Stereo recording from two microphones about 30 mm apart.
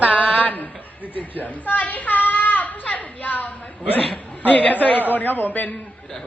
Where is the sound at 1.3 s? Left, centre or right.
Left.